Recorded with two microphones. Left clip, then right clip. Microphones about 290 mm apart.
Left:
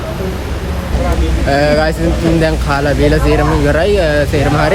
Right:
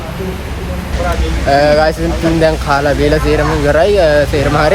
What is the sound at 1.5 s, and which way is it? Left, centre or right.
Speech, centre.